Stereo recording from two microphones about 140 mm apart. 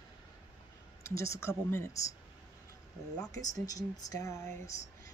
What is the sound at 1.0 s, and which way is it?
Speech, 20° left (ahead or behind).